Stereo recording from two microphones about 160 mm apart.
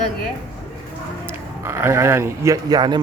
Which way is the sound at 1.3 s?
15° right (ahead or behind).